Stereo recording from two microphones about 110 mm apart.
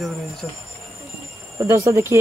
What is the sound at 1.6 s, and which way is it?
Speech, 25° right (ahead or behind).